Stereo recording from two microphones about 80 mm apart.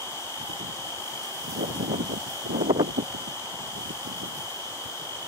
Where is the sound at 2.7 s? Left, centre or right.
Right.